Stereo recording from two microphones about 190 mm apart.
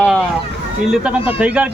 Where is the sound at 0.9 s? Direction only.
5° right (ahead or behind).